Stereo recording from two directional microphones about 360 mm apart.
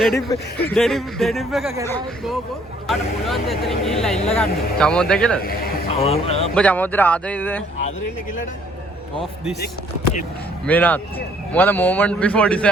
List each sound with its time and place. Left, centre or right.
0.0 s speech: centre
5.4 s speech: left
6.5 s speech: centre
10.7 s speech: centre